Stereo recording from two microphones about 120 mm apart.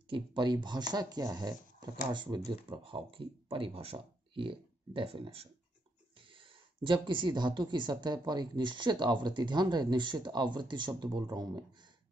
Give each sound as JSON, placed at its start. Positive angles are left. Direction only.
{"t": 0.1, "sound": "speech", "side_deg": -40}